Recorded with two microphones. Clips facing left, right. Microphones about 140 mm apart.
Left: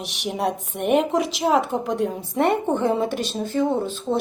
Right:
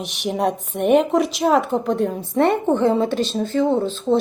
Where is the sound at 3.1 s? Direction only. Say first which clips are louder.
Right 5 dB; 25° right (ahead or behind).